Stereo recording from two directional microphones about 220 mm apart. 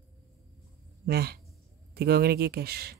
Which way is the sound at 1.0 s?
45° right (ahead or behind).